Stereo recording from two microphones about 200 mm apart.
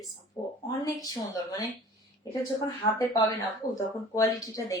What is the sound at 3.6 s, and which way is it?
Speech, 45° left (ahead or behind).